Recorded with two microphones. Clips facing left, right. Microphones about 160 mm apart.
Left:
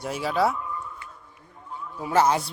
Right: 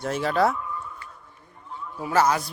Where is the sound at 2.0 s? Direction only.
25° left (ahead or behind).